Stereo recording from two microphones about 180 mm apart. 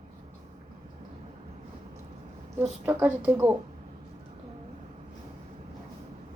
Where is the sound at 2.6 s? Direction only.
10° right (ahead or behind).